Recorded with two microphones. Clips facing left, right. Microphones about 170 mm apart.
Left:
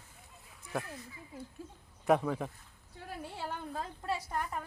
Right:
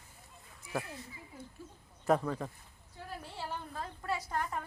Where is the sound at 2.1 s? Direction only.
Centre (ahead or behind).